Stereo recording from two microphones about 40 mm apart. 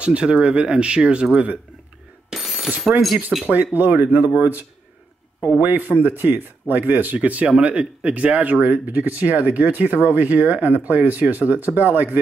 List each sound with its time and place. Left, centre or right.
0.0 s speech: right
2.2 s a sound: centre
3.4 s speech: right
7.2 s speech: right